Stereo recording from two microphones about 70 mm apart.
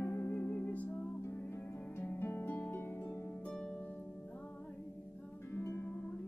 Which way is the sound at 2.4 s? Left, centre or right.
Left.